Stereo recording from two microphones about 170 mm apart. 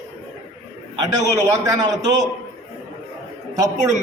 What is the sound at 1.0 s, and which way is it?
A man's voice, 20° right (ahead or behind).